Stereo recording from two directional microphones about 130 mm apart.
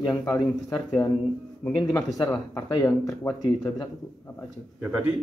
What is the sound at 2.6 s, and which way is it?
Speech, 20° left (ahead or behind).